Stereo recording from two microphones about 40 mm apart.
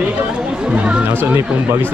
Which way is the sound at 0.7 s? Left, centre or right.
Right.